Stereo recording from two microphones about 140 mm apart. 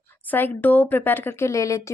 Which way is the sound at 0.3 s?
10° left (ahead or behind).